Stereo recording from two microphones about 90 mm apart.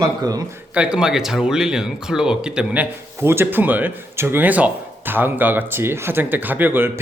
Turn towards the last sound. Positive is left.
turn(degrees=-25)  # may be behind; listen again after turning